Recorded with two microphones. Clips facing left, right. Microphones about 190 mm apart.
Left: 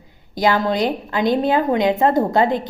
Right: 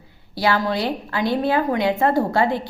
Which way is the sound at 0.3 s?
20° left (ahead or behind).